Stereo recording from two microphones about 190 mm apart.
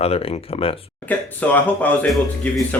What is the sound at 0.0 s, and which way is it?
Speech, 30° left (ahead or behind).